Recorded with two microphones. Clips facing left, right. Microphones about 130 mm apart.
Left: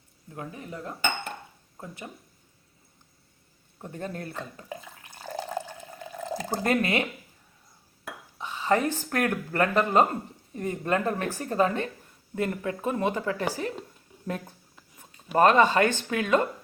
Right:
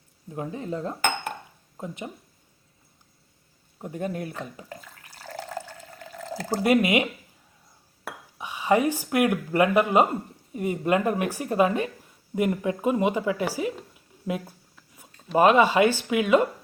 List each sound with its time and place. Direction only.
0.3 s speech: 25° right (ahead or behind)
3.8 s speech: 10° right (ahead or behind)
4.7 s water: 15° left (ahead or behind)
6.6 s speech: 15° right (ahead or behind)
8.4 s speech: 15° right (ahead or behind)